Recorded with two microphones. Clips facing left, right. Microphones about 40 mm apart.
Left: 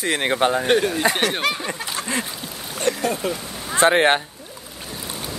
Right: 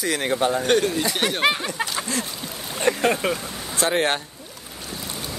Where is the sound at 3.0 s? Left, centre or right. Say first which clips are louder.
Right 2 dB; right.